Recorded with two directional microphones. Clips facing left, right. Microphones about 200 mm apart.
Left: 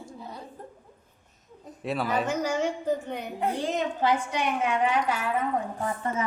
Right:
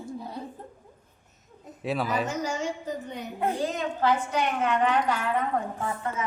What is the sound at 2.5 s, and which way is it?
Speech, 60° left (ahead or behind).